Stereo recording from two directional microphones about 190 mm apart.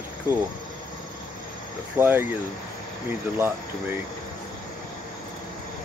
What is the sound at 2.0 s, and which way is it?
Speech, 10° right (ahead or behind).